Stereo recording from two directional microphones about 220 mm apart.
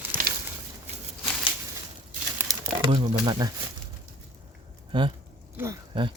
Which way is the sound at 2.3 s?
20° right (ahead or behind).